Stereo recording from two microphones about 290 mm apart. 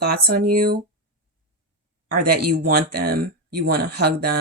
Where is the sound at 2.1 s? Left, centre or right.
Right.